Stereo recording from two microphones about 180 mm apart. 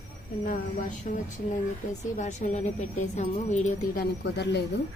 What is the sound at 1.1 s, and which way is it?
Speech, 40° left (ahead or behind).